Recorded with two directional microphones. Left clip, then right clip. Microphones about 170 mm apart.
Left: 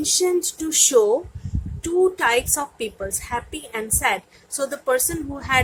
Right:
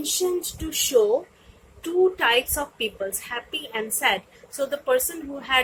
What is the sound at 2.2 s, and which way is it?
A woman's voice, 30° left (ahead or behind).